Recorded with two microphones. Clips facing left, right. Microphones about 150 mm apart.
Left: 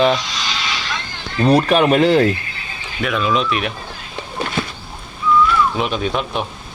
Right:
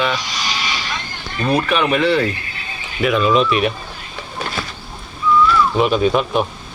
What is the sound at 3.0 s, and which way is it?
Speech, centre (ahead or behind).